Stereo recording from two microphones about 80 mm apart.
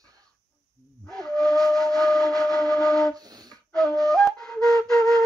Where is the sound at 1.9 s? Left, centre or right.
Centre.